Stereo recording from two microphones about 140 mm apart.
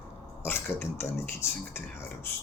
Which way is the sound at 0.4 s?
15° left (ahead or behind).